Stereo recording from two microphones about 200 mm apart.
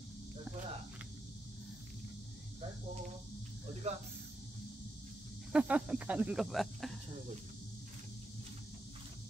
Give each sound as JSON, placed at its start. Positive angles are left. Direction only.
{"t": 3.9, "sound": "speech", "side_deg": -30}
{"t": 5.5, "sound": "speech", "side_deg": -5}